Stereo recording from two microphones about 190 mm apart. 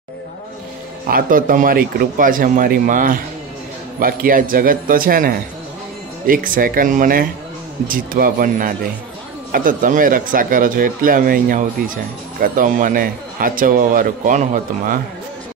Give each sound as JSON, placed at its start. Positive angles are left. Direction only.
{"t": 1.0, "sound": "speech", "side_deg": -45}